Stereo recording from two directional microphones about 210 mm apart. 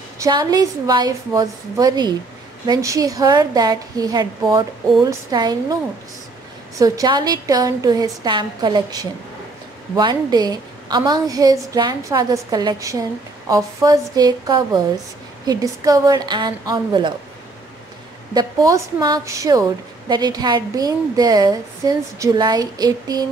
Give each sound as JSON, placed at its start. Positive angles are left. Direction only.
{"t": 0.2, "sound": "a woman's voice", "side_deg": -20}
{"t": 6.8, "sound": "a woman's voice", "side_deg": -20}
{"t": 18.3, "sound": "a woman's voice", "side_deg": -15}